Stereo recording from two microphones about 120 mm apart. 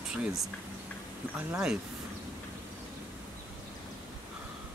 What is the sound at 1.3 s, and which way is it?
Speech, 5° right (ahead or behind).